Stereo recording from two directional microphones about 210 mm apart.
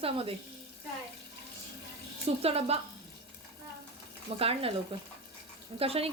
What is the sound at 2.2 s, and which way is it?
Speech, 30° right (ahead or behind).